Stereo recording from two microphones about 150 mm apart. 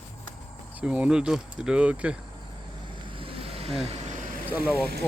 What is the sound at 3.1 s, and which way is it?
Vehicle, 35° right (ahead or behind).